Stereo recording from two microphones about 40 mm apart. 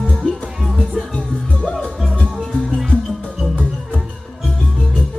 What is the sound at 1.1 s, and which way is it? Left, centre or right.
Music, left.